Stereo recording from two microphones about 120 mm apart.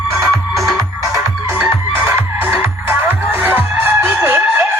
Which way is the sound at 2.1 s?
20° right (ahead or behind).